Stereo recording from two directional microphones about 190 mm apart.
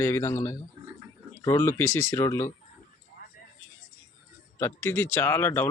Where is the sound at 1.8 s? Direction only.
90° left.